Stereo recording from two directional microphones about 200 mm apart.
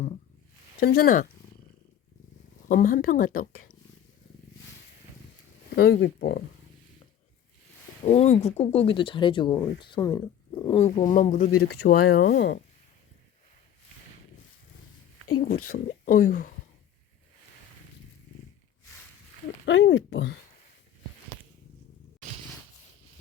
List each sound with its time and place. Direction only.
0.8 s speech: 45° left (ahead or behind)
2.6 s speech: 45° left (ahead or behind)
5.9 s speech: 55° left (ahead or behind)
8.0 s speech: 35° left (ahead or behind)
10.8 s speech: 40° left (ahead or behind)
11.6 s speech: 50° left (ahead or behind)
15.7 s speech: 45° left (ahead or behind)
19.6 s speech: 70° left (ahead or behind)
22.2 s roaring cats: 40° right (ahead or behind)